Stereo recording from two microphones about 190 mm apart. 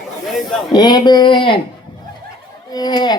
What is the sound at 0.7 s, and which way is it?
Speech, 20° left (ahead or behind).